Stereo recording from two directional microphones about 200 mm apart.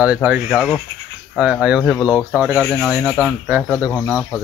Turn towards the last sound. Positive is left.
turn(degrees=10)  # may be behind; listen again after turning